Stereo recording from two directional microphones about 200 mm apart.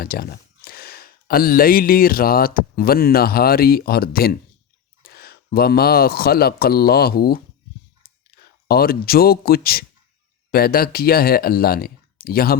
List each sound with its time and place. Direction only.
0.0 s speech: 50° left (ahead or behind)
8.6 s speech: 50° left (ahead or behind)